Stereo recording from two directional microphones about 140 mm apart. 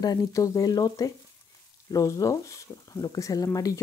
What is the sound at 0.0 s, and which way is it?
Speech, 25° left (ahead or behind).